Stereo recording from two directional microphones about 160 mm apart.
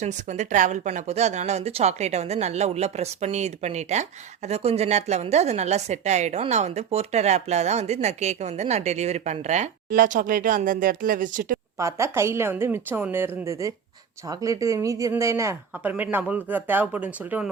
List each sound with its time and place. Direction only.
0.0 s a woman's voice: 50° right (ahead or behind)
11.8 s speech: 20° right (ahead or behind)